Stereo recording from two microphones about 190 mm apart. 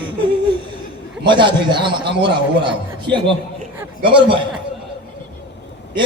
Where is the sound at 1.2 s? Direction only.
25° right (ahead or behind).